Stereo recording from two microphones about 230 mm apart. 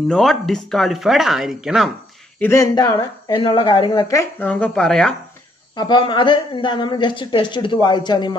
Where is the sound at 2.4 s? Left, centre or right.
Centre.